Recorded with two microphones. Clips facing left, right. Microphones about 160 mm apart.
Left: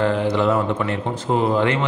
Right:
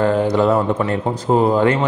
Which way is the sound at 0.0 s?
40° right (ahead or behind).